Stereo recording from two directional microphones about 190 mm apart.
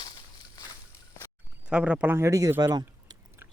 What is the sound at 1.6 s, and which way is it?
Speech, 5° right (ahead or behind).